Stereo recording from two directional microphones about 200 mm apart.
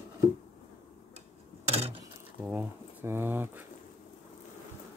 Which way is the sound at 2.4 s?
10° right (ahead or behind).